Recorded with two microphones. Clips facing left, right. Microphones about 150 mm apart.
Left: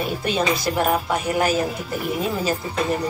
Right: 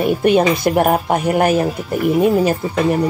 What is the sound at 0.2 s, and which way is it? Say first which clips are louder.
A woman's voice: right 9 dB; 55° right (ahead or behind).